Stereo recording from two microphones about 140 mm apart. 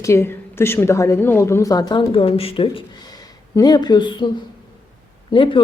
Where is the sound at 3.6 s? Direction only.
30° left (ahead or behind).